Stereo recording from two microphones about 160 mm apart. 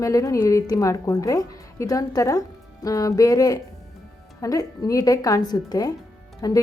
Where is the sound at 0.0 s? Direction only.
20° left (ahead or behind).